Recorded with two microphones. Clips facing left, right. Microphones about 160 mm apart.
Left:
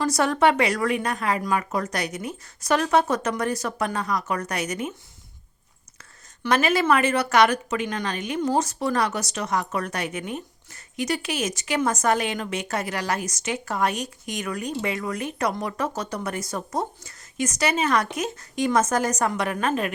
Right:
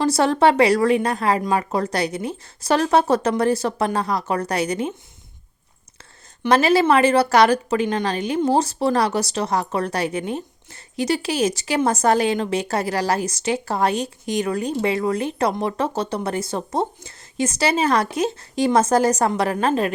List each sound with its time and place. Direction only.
0.0 s speech: 30° right (ahead or behind)
6.0 s speech: 30° right (ahead or behind)